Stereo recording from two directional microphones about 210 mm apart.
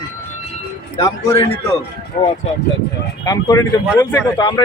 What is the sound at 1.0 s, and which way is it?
Speech, 15° left (ahead or behind).